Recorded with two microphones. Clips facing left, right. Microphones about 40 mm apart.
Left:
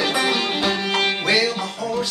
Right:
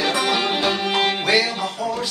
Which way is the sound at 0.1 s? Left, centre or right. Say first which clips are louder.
Right 1 dB; centre.